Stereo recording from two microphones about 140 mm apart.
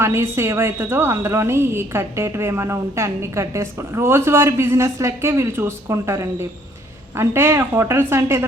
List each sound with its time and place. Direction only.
0.0 s a woman's voice: 20° right (ahead or behind)